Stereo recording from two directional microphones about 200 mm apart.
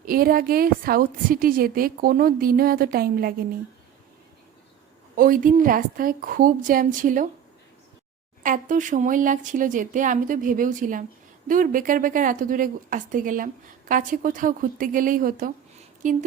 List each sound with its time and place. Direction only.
0.0 s a woman's voice: 45° right (ahead or behind)
5.1 s a woman's voice: 45° right (ahead or behind)
8.4 s a woman's voice: 40° right (ahead or behind)